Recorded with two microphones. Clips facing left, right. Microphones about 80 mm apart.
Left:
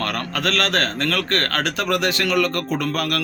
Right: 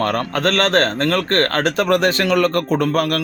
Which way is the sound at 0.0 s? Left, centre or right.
Right.